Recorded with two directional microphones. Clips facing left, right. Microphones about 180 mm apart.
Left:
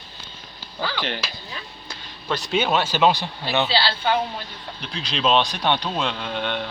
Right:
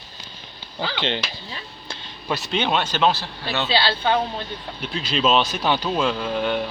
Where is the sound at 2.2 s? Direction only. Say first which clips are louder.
Left 1 dB; 5° right (ahead or behind); by 3.7 s 15° left (ahead or behind).